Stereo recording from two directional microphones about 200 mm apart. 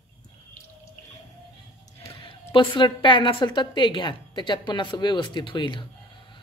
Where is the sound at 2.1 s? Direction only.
25° left (ahead or behind).